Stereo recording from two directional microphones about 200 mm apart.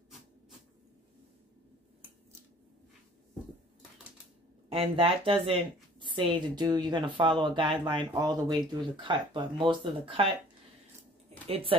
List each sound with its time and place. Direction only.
4.6 s a woman's voice: 30° right (ahead or behind)
11.4 s speech: 30° right (ahead or behind)